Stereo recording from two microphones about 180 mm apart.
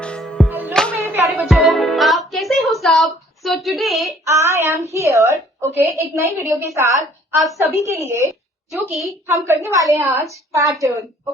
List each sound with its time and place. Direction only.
0.0 s music: 5° left (ahead or behind)
0.7 s music: 5° left (ahead or behind)
1.0 s music: 15° right (ahead or behind)
1.4 s music: centre (ahead or behind)
4.3 s a woman's voice: 15° right (ahead or behind)
8.0 s a woman's voice: 15° right (ahead or behind)
8.7 s a woman's voice: centre (ahead or behind)
9.2 s a woman's voice: 15° right (ahead or behind)